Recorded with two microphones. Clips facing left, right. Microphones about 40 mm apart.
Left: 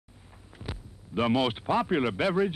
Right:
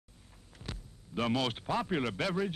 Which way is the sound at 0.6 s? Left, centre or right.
Centre.